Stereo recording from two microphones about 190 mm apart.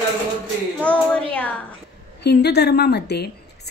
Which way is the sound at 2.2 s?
60° left (ahead or behind).